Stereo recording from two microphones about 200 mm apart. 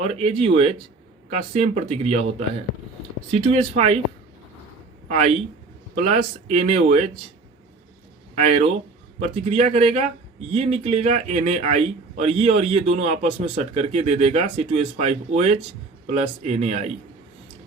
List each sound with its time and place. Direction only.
0.0 s speech: 30° right (ahead or behind)
3.3 s speech: 30° right (ahead or behind)
5.0 s speech: 35° right (ahead or behind)
8.4 s speech: 30° right (ahead or behind)